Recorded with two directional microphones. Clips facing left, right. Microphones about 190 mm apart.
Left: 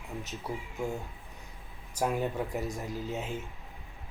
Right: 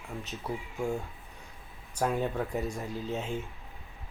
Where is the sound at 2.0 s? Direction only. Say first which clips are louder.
Right 1 dB; 10° left (ahead or behind).